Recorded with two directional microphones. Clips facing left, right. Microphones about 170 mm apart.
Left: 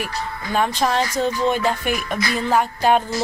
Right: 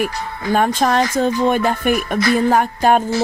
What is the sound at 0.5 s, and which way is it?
Speech, 50° right (ahead or behind).